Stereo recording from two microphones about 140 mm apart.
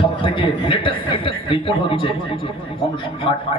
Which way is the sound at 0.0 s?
40° left (ahead or behind).